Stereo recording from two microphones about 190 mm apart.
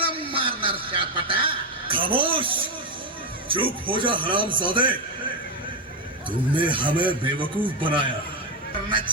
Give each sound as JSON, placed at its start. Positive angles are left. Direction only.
{"t": 0.0, "sound": "a sound", "side_deg": -30}
{"t": 3.5, "sound": "a man's voice", "side_deg": -25}
{"t": 6.5, "sound": "a man's voice", "side_deg": -25}